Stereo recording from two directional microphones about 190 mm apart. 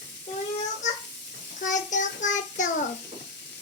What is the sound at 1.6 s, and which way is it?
Child singing, 40° left (ahead or behind).